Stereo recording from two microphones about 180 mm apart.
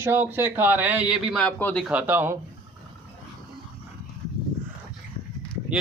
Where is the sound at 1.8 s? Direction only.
10° right (ahead or behind).